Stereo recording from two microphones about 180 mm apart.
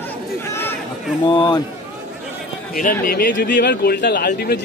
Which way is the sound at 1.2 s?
25° left (ahead or behind).